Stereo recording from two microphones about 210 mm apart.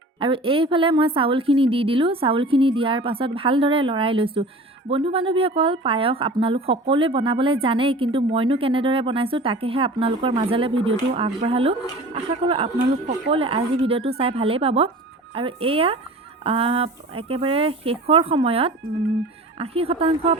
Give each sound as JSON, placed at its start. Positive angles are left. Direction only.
{"t": 0.2, "sound": "speech", "side_deg": -25}